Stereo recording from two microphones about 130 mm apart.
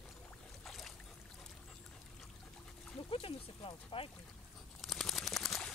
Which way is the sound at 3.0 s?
45° left (ahead or behind).